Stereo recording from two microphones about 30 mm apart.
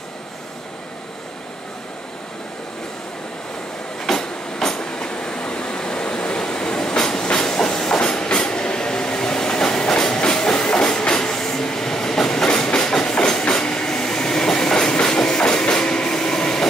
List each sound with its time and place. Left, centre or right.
4.2 s train: left
8.0 s train: left